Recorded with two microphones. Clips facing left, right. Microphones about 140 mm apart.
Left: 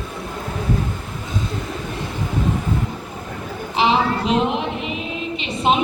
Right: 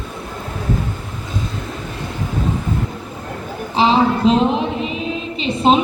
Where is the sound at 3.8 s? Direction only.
35° right (ahead or behind).